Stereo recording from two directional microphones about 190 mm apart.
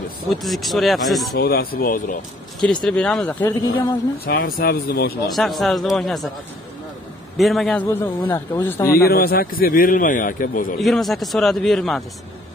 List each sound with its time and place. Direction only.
0.3 s a man's voice: centre (ahead or behind)
1.3 s a man's voice: 55° left (ahead or behind)
2.6 s a man's voice: 5° left (ahead or behind)
4.3 s a man's voice: 50° left (ahead or behind)
5.3 s a man's voice: centre (ahead or behind)
7.3 s a man's voice: centre (ahead or behind)
9.0 s a man's voice: 50° left (ahead or behind)
10.8 s a man's voice: centre (ahead or behind)